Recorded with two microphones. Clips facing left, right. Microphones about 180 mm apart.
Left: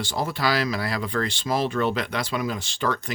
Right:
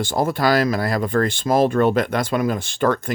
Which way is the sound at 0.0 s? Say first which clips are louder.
Right 6 dB; 50° right (ahead or behind).